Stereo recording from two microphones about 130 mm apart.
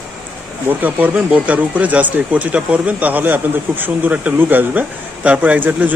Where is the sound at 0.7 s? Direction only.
15° right (ahead or behind).